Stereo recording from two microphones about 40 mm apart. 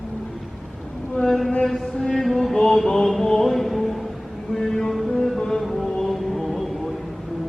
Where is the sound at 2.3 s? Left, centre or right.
Centre.